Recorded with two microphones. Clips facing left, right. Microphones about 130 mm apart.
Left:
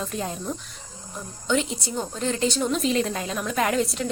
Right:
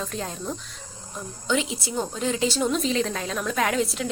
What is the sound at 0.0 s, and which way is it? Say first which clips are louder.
A woman's voice: left 1 dB; 5° left (ahead or behind).